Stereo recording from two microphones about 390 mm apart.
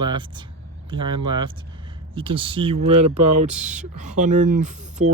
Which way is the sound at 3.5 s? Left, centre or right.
Centre.